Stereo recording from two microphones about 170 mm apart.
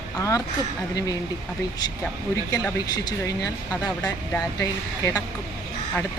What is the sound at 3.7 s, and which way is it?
Speech, 15° left (ahead or behind).